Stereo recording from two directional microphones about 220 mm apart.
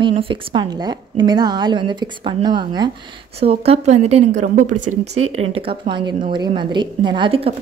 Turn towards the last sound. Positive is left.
turn(degrees=-25)  # may be behind; listen again after turning